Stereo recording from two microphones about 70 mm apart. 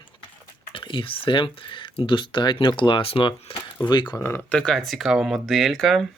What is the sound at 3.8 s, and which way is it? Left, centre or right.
Speech, left.